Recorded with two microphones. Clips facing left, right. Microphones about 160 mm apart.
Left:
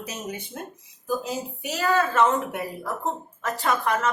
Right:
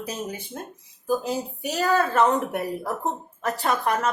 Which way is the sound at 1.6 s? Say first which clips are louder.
Right 1 dB; 35° right (ahead or behind).